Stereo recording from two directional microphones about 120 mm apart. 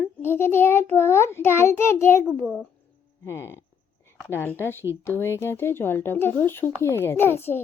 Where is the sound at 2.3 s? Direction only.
15° left (ahead or behind).